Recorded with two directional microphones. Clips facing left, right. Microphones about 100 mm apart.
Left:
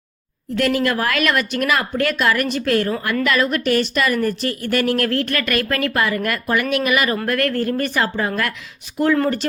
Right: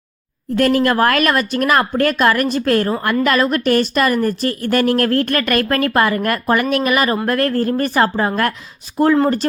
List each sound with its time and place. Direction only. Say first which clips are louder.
0.5 s a woman's voice: right 4 dB; 45° right (ahead or behind)